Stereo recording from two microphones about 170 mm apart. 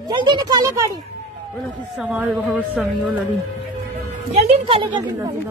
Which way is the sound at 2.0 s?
10° right (ahead or behind).